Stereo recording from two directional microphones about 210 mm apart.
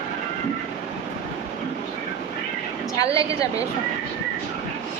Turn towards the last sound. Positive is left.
turn(degrees=15)  # may be behind; listen again after turning